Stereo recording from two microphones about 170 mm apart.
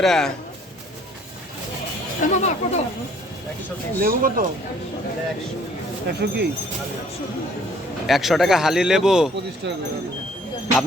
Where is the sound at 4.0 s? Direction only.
55° right (ahead or behind).